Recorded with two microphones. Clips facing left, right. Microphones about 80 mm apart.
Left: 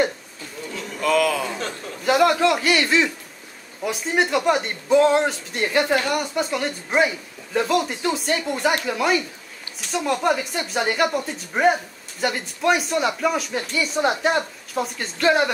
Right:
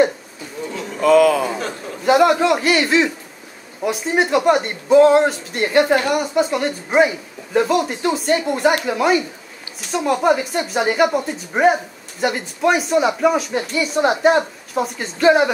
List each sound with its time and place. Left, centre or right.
0.7 s a sound: centre
1.0 s a man's voice: right
1.4 s a man's voice: centre
2.0 s speech: centre